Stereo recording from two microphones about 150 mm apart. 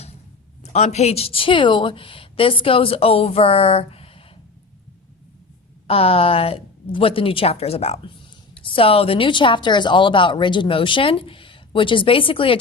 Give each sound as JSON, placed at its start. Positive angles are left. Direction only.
{"t": 0.6, "sound": "a woman's voice", "side_deg": 50}
{"t": 5.9, "sound": "a woman's voice", "side_deg": 40}